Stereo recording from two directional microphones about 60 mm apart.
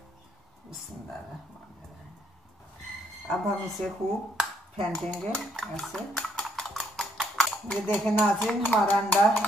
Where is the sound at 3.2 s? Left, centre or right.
Centre.